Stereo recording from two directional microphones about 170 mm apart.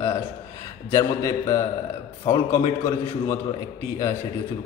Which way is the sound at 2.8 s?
15° left (ahead or behind).